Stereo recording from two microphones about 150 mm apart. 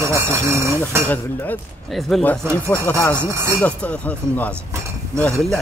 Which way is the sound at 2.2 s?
10° left (ahead or behind).